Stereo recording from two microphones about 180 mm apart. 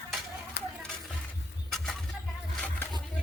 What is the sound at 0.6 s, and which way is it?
Children playing, 75° left (ahead or behind).